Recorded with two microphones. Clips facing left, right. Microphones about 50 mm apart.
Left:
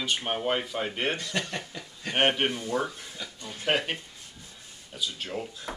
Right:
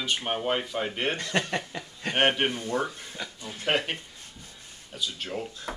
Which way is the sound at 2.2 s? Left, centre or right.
Centre.